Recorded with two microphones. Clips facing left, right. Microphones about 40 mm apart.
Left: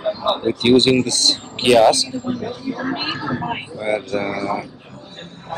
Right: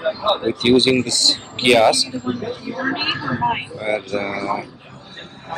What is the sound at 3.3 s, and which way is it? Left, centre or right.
Speech, right.